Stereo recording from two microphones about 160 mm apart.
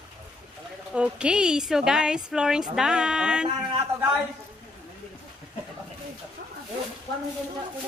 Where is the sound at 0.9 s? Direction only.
5° right (ahead or behind).